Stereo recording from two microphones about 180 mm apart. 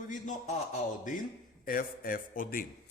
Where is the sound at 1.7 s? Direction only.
50° left (ahead or behind).